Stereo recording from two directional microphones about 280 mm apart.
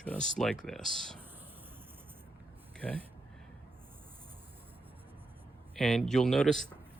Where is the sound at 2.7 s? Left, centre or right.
Centre.